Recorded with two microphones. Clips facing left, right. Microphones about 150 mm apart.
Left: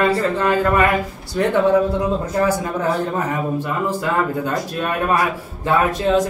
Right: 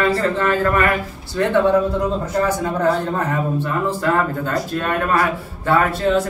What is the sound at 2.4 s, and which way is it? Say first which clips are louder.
Speech: right 2 dB; 10° left (ahead or behind).